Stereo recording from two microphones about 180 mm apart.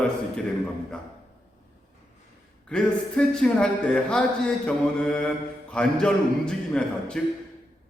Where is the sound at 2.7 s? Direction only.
5° left (ahead or behind).